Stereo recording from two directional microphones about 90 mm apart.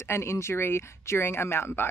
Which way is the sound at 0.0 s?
30° left (ahead or behind).